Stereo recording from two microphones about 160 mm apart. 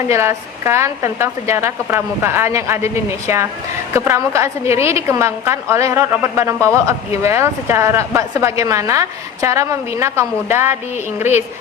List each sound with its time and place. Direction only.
0.1 s a woman's voice: 15° right (ahead or behind)